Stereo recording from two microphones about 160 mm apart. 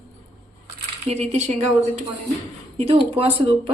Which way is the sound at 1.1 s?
45° right (ahead or behind).